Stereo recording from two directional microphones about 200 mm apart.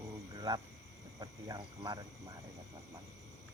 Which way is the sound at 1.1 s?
20° right (ahead or behind).